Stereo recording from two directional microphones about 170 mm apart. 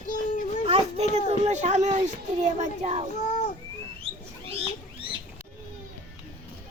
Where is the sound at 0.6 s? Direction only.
40° right (ahead or behind).